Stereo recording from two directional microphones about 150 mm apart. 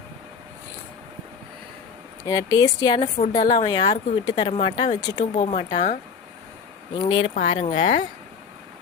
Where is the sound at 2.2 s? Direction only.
25° left (ahead or behind).